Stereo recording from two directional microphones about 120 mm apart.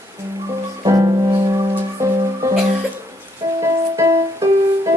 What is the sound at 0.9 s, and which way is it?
Music, 30° right (ahead or behind).